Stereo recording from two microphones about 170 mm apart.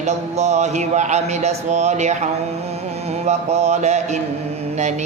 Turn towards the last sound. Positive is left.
turn(degrees=-40)  # may be behind; listen again after turning